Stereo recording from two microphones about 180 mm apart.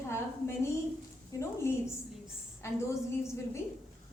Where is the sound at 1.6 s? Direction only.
15° left (ahead or behind).